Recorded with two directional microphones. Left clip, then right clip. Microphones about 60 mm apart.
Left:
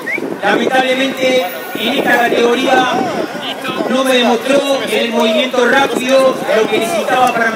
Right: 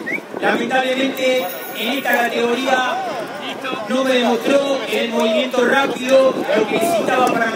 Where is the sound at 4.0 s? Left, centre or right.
Left.